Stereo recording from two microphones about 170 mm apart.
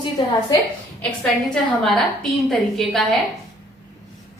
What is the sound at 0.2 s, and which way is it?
Speech, 30° left (ahead or behind).